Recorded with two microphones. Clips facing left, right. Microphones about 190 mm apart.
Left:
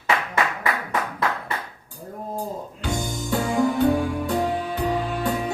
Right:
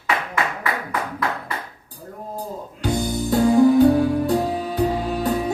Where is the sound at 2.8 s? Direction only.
40° right (ahead or behind).